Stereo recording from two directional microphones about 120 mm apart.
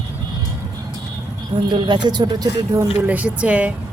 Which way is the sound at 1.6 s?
40° right (ahead or behind).